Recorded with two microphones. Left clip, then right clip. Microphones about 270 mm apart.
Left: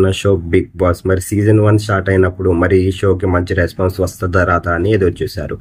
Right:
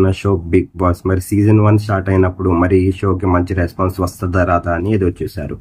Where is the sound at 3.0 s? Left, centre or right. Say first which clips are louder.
Left 2 dB; right.